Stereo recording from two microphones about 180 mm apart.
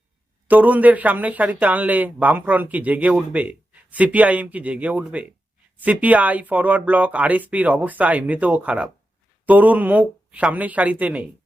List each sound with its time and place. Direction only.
0.4 s speech: 10° right (ahead or behind)